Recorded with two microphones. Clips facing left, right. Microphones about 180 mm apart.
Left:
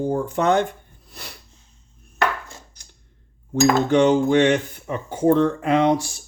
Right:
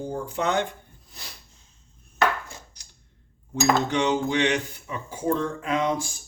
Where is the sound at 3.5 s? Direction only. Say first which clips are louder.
Left 6 dB; 50° left (ahead or behind).